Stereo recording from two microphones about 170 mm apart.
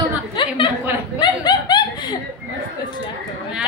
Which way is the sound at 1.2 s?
25° left (ahead or behind).